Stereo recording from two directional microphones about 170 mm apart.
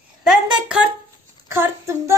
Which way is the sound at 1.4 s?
15° right (ahead or behind).